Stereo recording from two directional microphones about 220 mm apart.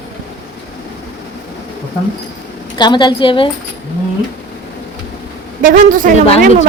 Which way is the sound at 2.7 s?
20° left (ahead or behind).